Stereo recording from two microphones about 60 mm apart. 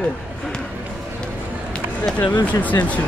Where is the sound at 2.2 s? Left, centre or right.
Left.